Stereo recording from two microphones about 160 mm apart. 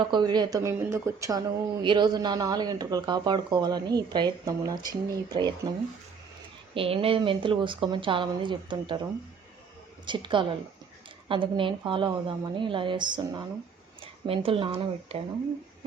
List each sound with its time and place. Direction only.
0.1 s speech: 25° right (ahead or behind)
6.7 s speech: 35° right (ahead or behind)
10.1 s speech: 30° right (ahead or behind)